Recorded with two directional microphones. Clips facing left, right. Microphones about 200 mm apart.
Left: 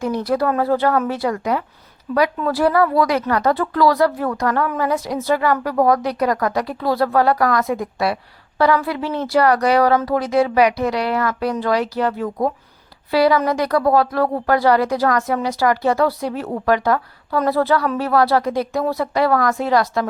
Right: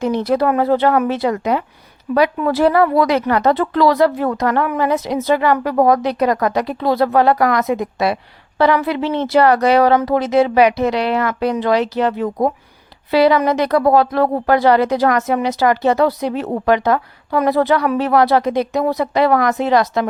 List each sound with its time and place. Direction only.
0.0 s a woman's voice: 25° right (ahead or behind)